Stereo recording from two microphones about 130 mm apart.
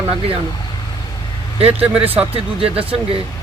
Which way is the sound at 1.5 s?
50° right (ahead or behind).